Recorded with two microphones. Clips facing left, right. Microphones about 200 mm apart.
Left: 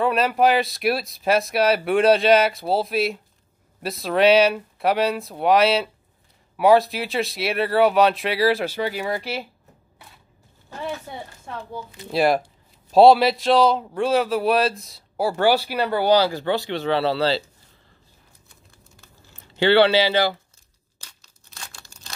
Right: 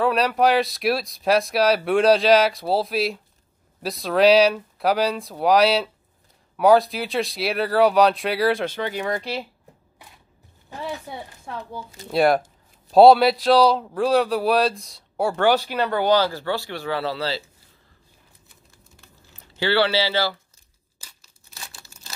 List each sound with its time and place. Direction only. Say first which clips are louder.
0.0 s speech: even; centre (ahead or behind)
10.8 s speech: left 1 dB; centre (ahead or behind); by 17.4 s 30° left (ahead or behind)
19.6 s speech: left 5 dB; 20° left (ahead or behind)
21.0 s tearing: left 1 dB; 5° right (ahead or behind)